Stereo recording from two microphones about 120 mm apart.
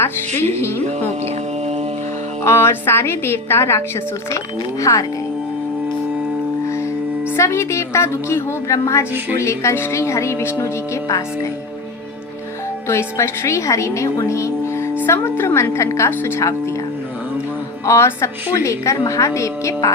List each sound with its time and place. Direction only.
0.0 s a woman's voice: 20° left (ahead or behind)
0.9 s mantra: 65° right (ahead or behind)
2.4 s a woman's voice: 20° left (ahead or behind)
6.7 s music: 25° left (ahead or behind)
7.3 s a woman's voice: 25° left (ahead or behind)
12.9 s a woman's voice: 20° left (ahead or behind)
17.8 s a woman's voice: 25° left (ahead or behind)